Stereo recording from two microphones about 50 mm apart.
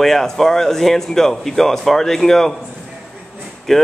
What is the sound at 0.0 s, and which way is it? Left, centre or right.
Speech, centre.